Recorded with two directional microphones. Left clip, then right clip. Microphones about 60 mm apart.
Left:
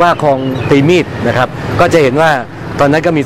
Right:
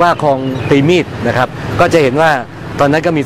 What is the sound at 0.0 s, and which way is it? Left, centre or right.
Speech, centre.